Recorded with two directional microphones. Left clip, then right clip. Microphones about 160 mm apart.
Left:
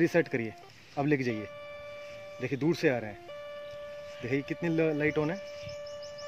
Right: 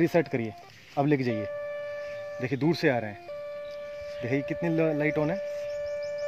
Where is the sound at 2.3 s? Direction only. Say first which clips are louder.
Right 2 dB; 60° right (ahead or behind).